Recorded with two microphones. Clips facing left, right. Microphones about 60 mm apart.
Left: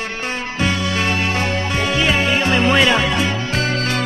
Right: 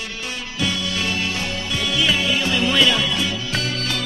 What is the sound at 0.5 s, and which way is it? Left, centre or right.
Music, left.